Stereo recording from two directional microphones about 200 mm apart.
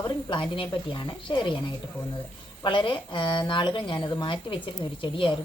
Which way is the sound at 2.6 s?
25° left (ahead or behind).